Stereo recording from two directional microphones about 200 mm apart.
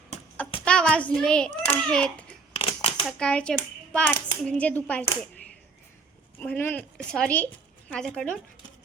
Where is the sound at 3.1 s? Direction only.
5° left (ahead or behind).